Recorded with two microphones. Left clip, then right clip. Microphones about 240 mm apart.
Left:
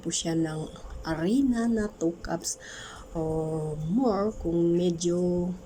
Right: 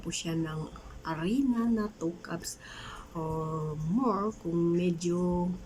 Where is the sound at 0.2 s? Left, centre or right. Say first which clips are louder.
Left 6 dB; centre.